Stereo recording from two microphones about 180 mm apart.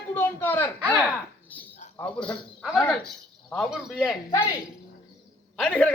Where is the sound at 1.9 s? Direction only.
5° left (ahead or behind).